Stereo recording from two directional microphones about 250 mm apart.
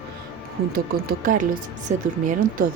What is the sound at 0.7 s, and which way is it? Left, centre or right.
Speech, right.